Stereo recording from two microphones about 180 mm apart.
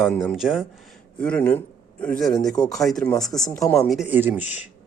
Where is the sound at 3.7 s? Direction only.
Centre (ahead or behind).